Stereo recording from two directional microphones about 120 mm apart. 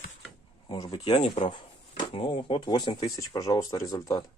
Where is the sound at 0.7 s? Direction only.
40° left (ahead or behind).